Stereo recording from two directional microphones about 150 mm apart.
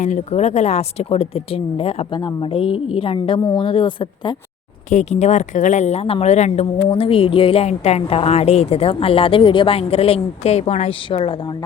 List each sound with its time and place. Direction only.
0.0 s speech: 50° left (ahead or behind); by 4.4 s 30° left (ahead or behind)
4.9 s speech: 50° left (ahead or behind)